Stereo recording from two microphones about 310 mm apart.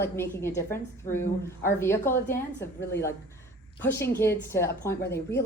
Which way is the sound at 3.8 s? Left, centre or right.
Centre.